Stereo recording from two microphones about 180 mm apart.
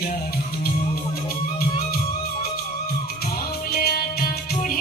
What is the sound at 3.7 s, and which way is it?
Music, 60° left (ahead or behind).